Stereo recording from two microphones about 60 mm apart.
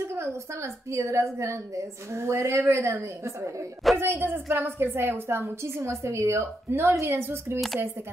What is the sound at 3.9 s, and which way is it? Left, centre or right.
A woman's voice, right.